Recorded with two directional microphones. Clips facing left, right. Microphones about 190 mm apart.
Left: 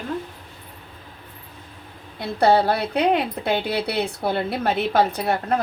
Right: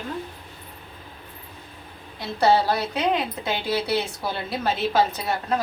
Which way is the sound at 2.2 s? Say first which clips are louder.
Left 2 dB; 60° left (ahead or behind).